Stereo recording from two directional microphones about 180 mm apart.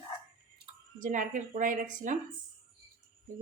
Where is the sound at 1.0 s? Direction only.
45° right (ahead or behind).